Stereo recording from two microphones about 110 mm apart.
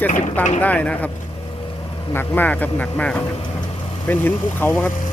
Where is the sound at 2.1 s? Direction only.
20° left (ahead or behind).